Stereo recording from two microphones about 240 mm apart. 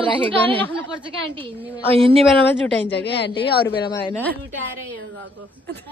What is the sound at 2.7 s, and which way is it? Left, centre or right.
Speech, left.